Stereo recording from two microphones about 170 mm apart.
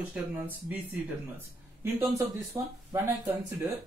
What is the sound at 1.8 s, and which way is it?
Speech, 15° right (ahead or behind).